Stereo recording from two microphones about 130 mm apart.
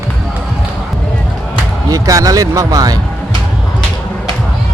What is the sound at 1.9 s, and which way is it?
Speech, 25° right (ahead or behind).